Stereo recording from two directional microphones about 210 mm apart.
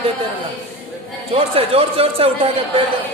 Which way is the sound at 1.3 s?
25° right (ahead or behind).